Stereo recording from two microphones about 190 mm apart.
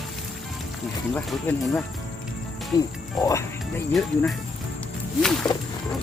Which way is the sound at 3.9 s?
Centre (ahead or behind).